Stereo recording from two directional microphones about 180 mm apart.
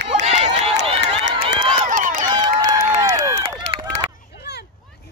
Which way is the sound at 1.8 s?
45° right (ahead or behind).